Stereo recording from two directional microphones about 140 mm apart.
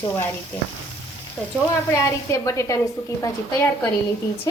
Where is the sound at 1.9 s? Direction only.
20° left (ahead or behind).